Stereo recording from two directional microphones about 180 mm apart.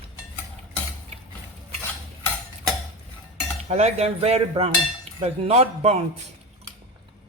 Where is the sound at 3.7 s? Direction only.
35° right (ahead or behind).